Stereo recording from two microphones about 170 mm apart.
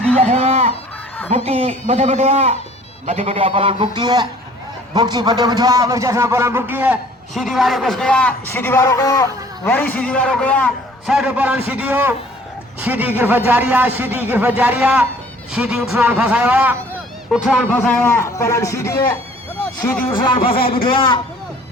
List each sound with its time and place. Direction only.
0.2 s a sound: 40° right (ahead or behind)
1.5 s a man's voice: 35° right (ahead or behind); by 11.1 s 10° left (ahead or behind)
11.1 s a man's voice: 5° right (ahead or behind); by 20.1 s 10° left (ahead or behind)
20.1 s speech: 30° left (ahead or behind)